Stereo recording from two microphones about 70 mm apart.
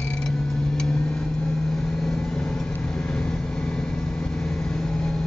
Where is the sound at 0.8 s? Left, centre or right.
Centre.